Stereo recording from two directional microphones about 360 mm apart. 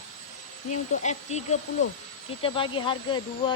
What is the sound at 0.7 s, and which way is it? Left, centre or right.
Speech, centre.